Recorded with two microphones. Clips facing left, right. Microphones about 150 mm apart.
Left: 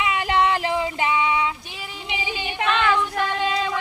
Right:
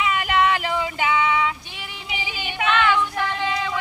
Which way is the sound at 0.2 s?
30° left (ahead or behind).